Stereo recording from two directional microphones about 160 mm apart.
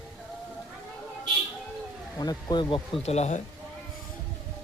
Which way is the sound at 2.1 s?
25° left (ahead or behind).